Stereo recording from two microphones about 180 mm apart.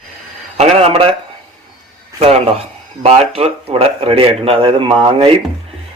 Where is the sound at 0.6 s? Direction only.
35° right (ahead or behind).